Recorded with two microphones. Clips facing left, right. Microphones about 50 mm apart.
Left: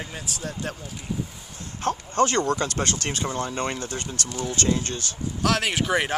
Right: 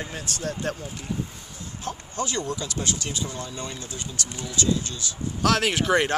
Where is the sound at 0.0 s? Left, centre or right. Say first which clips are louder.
Right 2 dB; centre.